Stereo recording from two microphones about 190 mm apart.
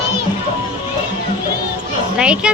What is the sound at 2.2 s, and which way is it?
Speech, 5° right (ahead or behind).